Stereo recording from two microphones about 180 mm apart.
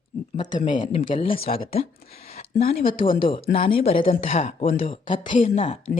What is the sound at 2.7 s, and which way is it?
Speech, 30° left (ahead or behind).